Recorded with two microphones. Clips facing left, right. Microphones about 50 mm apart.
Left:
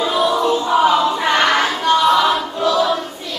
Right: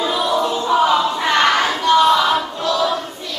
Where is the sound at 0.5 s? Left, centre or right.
Centre.